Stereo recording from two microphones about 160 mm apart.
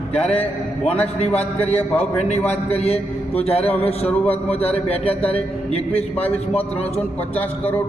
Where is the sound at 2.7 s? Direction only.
40° left (ahead or behind).